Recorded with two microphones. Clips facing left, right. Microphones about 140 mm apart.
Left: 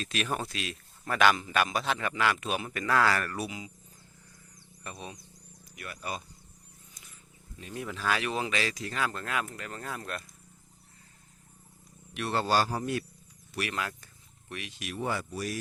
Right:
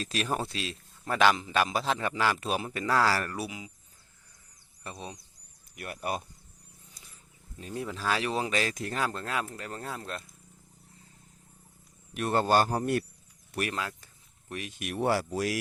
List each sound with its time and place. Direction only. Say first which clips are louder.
0.0 s a man's voice: right 2 dB; 35° right (ahead or behind)
3.2 s speech: even; 10° right (ahead or behind)
4.8 s speech: right 1 dB; 30° right (ahead or behind)
5.7 s speech: right 4 dB; 55° right (ahead or behind)
7.6 s a man's voice: right 1 dB; 30° right (ahead or behind)
12.1 s a man's voice: right 3 dB; 45° right (ahead or behind)
13.7 s speech: left 2 dB; 25° right (ahead or behind)
14.5 s speech: right 3 dB; 45° right (ahead or behind); by 15.5 s 90° right